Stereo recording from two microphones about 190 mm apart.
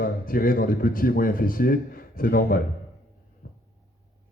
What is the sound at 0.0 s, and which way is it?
Speech, 50° left (ahead or behind).